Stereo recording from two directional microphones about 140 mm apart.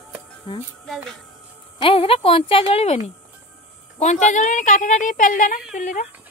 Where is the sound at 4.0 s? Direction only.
60° left (ahead or behind).